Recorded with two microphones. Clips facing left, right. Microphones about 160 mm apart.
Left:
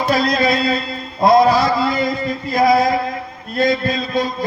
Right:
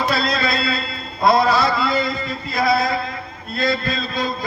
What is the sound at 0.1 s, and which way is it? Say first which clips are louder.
Speech: left 5 dB; 15° left (ahead or behind).